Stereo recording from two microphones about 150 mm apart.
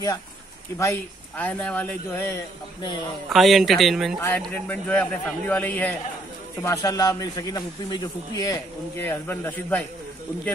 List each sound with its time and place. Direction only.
0.7 s speech: 15° left (ahead or behind)
3.3 s a man's voice: centre (ahead or behind)
4.5 s speech: 10° left (ahead or behind)
6.6 s a man's voice: 20° left (ahead or behind)